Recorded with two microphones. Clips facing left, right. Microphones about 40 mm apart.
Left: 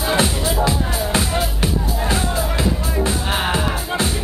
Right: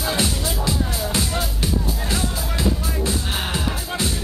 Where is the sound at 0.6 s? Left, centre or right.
Left.